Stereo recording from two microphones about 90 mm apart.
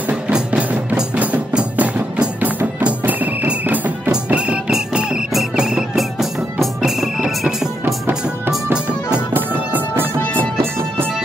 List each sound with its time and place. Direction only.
0.1 s music: 15° right (ahead or behind)
8.7 s music: 15° right (ahead or behind)